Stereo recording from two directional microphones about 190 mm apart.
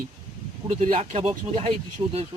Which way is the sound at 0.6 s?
35° right (ahead or behind).